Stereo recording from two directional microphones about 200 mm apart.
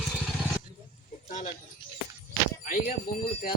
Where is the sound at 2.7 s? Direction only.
45° left (ahead or behind).